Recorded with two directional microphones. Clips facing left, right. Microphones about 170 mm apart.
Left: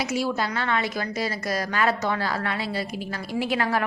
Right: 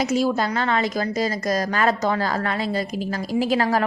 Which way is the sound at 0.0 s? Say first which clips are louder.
Right 5 dB; 45° right (ahead or behind).